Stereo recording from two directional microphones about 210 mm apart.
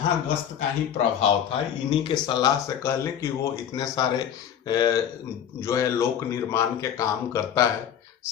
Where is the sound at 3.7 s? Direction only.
20° left (ahead or behind).